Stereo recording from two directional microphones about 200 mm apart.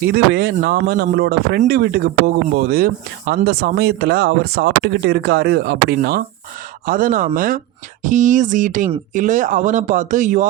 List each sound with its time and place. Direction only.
0.0 s speech: 50° right (ahead or behind)